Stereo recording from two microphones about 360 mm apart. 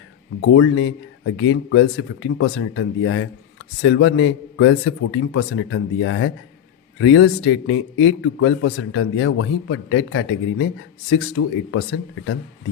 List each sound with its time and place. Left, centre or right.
0.4 s a man's voice: left